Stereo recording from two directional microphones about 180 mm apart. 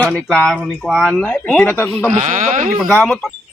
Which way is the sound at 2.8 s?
5° left (ahead or behind).